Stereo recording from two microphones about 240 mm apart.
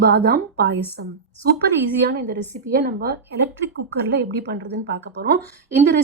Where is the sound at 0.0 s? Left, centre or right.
Right.